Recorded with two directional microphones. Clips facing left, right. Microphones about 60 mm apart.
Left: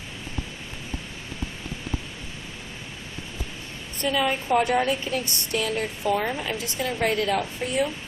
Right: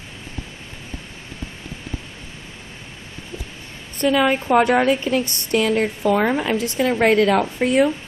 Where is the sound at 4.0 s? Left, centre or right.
Right.